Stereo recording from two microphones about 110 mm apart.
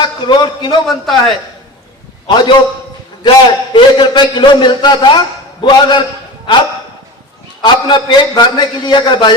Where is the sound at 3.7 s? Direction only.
45° left (ahead or behind).